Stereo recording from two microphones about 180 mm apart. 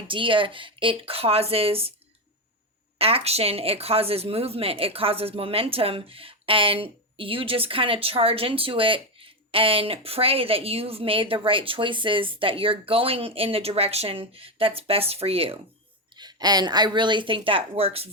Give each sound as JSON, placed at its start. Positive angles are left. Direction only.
{"t": 0.1, "sound": "speech", "side_deg": -30}
{"t": 3.0, "sound": "speech", "side_deg": -35}